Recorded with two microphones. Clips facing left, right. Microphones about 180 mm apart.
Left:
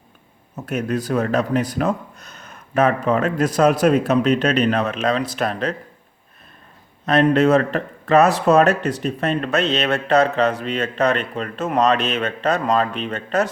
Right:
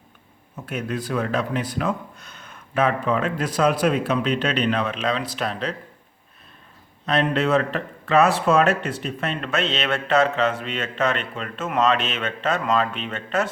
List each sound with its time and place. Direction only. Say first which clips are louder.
0.5 s speech: left 5 dB; 40° left (ahead or behind)
7.0 s speech: left 6 dB; 45° left (ahead or behind)